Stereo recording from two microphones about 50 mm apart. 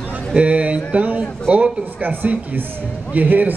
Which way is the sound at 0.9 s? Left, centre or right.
Right.